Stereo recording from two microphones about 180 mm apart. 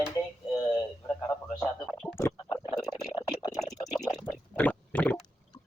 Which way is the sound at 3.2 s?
20° left (ahead or behind).